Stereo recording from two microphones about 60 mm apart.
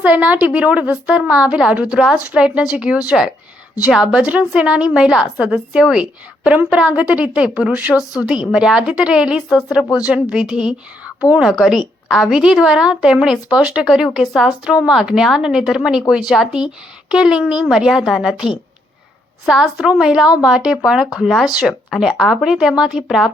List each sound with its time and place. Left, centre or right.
0.0 s a woman's voice: right
4.0 s a woman's voice: centre
11.5 s a woman's voice: centre